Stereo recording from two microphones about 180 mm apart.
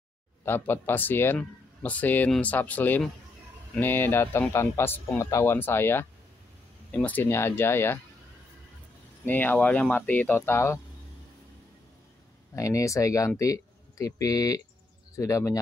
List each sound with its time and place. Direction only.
0.5 s speech: 10° left (ahead or behind)
9.2 s speech: 10° left (ahead or behind)
12.5 s speech: 20° left (ahead or behind)